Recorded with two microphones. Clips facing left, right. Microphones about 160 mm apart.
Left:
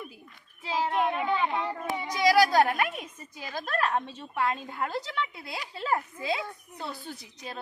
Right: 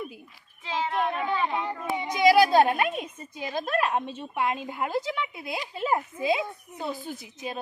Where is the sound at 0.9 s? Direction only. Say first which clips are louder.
Even; 10° left (ahead or behind).